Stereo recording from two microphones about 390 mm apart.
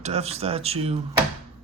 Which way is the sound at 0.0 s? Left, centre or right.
Centre.